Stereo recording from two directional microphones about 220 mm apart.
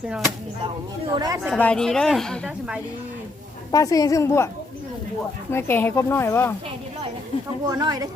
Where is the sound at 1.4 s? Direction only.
5° left (ahead or behind).